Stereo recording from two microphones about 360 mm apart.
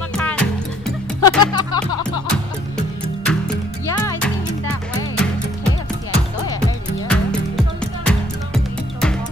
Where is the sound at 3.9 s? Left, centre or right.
Centre.